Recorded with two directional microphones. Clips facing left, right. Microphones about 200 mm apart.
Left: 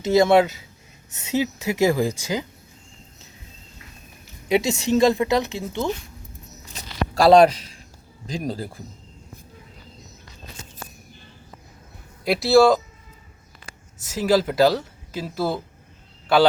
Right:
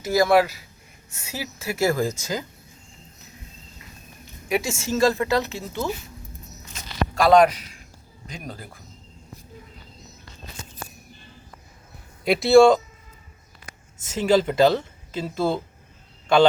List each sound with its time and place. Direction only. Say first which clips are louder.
0.0 s a woman's voice: left 2 dB; 25° left (ahead or behind)
4.4 s a woman's voice: left 5 dB; 20° left (ahead or behind)
6.7 s a sound: left 2 dB; 30° left (ahead or behind)
8.3 s speech: left 9 dB; 30° left (ahead or behind)
12.2 s speech: right 2 dB; centre (ahead or behind)
14.1 s speech: even; 5° left (ahead or behind)